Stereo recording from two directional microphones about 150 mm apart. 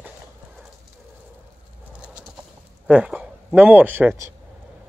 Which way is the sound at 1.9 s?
5° right (ahead or behind).